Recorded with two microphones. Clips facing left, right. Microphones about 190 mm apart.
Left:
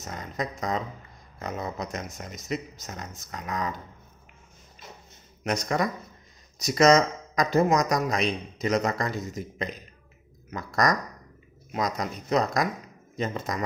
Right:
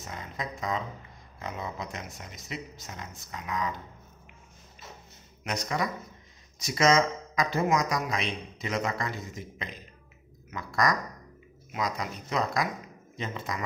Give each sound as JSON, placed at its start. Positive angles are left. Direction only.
{"t": 0.0, "sound": "speech", "side_deg": 40}
{"t": 5.4, "sound": "speech", "side_deg": 45}